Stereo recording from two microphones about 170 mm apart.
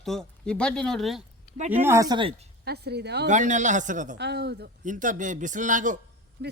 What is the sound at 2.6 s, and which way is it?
Speech, 70° right (ahead or behind).